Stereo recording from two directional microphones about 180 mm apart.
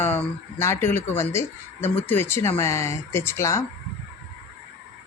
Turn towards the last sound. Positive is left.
turn(degrees=15)  # may be behind; listen again after turning